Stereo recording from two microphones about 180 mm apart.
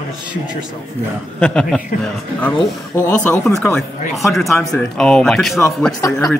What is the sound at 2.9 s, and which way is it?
Speech, 15° left (ahead or behind).